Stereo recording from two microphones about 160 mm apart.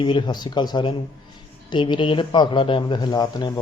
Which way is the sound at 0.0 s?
30° left (ahead or behind).